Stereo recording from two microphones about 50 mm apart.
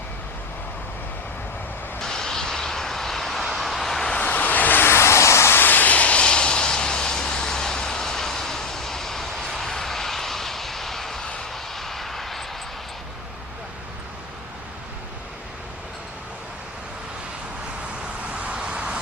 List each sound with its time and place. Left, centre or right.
2.0 s vehicle: centre
4.2 s vehicle: left
4.8 s vehicle: left
5.5 s vehicle: left; by 12.5 s centre
18.3 s vehicle: right